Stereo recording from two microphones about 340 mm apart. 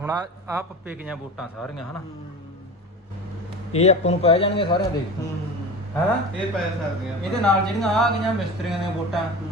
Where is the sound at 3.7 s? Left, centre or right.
Centre.